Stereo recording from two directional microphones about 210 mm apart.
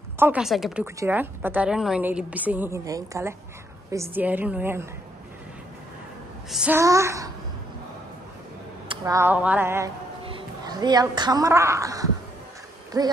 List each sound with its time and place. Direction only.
0.2 s a woman's voice: 5° right (ahead or behind)
6.5 s a woman's voice: 5° right (ahead or behind)
8.8 s speech: 15° right (ahead or behind)
10.2 s a woman's voice: 20° right (ahead or behind)